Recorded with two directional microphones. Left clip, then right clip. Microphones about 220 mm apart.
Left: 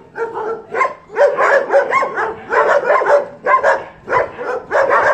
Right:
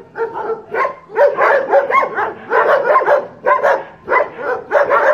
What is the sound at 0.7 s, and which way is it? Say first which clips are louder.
Dog: even; centre (ahead or behind).